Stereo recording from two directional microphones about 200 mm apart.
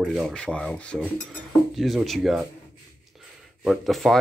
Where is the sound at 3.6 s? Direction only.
Centre (ahead or behind).